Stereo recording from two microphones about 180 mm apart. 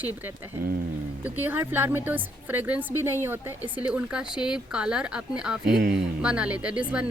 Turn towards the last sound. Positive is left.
turn(degrees=-5)  # may be behind; listen again after turning